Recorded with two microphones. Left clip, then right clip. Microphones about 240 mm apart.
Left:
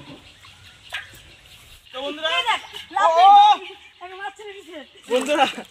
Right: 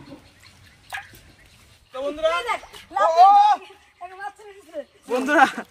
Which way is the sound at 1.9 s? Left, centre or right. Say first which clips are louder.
Right 1 dB; centre.